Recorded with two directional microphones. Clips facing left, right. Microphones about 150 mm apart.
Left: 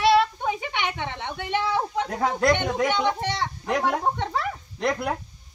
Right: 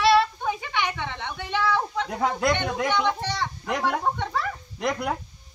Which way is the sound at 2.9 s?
15° left (ahead or behind).